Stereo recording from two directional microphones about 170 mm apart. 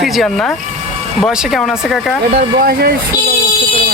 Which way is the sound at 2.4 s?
65° right (ahead or behind).